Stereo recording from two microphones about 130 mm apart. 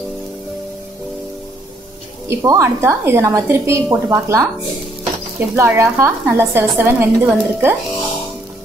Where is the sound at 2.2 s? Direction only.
25° right (ahead or behind).